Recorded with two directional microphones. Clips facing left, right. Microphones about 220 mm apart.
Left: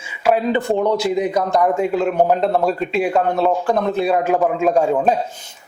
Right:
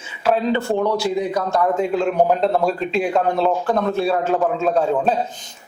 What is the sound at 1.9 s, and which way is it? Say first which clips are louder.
Speech: left 1 dB; 5° left (ahead or behind).